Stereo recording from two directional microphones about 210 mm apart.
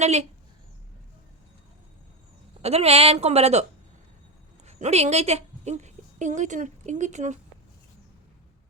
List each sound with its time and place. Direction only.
0.0 s speech: 30° right (ahead or behind)
2.6 s a woman's voice: 30° right (ahead or behind)